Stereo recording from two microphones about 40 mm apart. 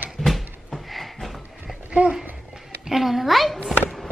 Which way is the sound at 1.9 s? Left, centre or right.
Right.